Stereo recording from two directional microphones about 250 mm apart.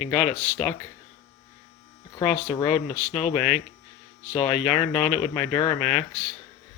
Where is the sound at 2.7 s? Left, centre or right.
Left.